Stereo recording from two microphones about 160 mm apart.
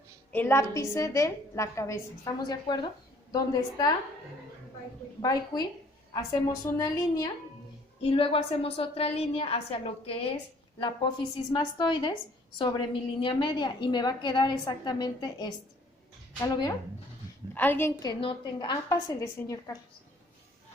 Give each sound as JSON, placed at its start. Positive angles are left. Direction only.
{"t": 0.3, "sound": "a woman's voice", "side_deg": 15}
{"t": 5.2, "sound": "a woman's voice", "side_deg": 25}
{"t": 6.7, "sound": "a woman's voice", "side_deg": 20}
{"t": 8.1, "sound": "a woman's voice", "side_deg": 35}
{"t": 17.5, "sound": "a woman's voice", "side_deg": 15}